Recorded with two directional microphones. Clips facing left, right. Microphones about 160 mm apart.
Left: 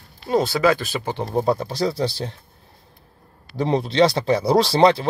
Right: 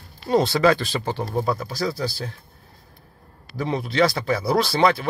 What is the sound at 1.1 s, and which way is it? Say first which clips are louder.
Speech: left 5 dB; 20° left (ahead or behind).